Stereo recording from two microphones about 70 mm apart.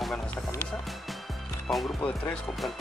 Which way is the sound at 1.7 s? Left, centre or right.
Centre.